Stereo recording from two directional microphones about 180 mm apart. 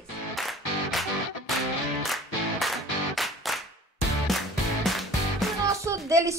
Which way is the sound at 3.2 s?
Centre (ahead or behind).